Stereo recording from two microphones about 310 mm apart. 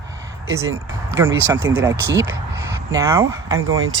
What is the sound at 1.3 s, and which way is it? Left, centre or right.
Speech, right.